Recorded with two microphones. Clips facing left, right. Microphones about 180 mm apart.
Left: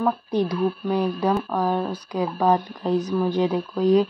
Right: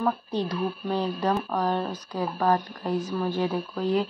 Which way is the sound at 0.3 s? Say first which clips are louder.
Left 6 dB; 10° left (ahead or behind).